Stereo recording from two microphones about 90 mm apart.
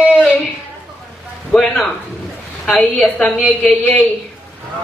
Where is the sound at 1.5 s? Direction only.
5° left (ahead or behind).